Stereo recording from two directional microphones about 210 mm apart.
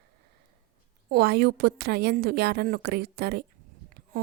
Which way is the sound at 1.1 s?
50° right (ahead or behind).